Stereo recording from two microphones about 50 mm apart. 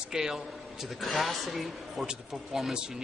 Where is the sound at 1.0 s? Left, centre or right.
Centre.